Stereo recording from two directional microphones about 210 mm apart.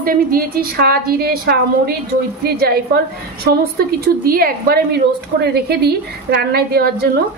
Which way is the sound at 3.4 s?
45° right (ahead or behind).